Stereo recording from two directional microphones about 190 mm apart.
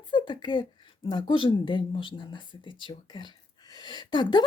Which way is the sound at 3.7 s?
25° left (ahead or behind).